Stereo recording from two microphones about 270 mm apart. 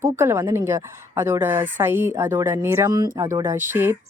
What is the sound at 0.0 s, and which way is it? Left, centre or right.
Speech, centre.